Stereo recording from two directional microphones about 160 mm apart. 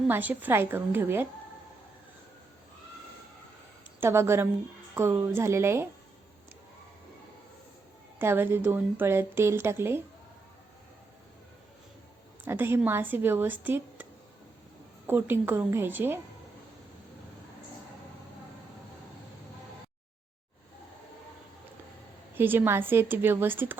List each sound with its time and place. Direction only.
0.1 s a woman's voice: 10° right (ahead or behind)
4.0 s a woman's voice: 15° right (ahead or behind)
8.2 s a woman's voice: 15° right (ahead or behind)
12.5 s a woman's voice: 15° right (ahead or behind)
22.4 s a woman's voice: 15° right (ahead or behind)